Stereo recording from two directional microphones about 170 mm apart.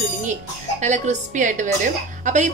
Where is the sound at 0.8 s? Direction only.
45° right (ahead or behind).